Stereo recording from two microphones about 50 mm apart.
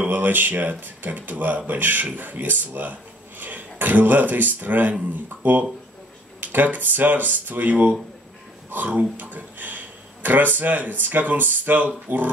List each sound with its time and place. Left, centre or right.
0.1 s speech: right
8.8 s speech: right